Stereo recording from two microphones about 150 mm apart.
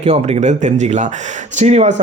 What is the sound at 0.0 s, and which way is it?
A man's voice, 45° right (ahead or behind).